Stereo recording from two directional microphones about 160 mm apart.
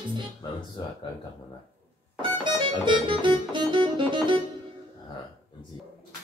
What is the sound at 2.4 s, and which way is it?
Music, 30° right (ahead or behind).